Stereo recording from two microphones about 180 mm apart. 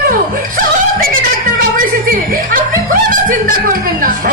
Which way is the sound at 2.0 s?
50° right (ahead or behind).